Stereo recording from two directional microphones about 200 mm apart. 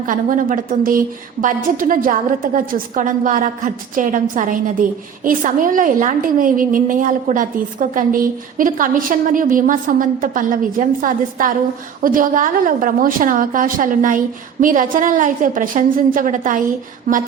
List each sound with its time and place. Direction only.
0.0 s a woman's voice: 40° right (ahead or behind)